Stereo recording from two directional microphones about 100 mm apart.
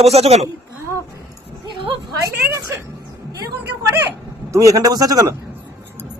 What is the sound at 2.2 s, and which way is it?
Speech, 30° right (ahead or behind).